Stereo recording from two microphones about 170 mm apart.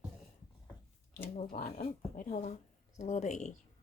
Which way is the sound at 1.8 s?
50° left (ahead or behind).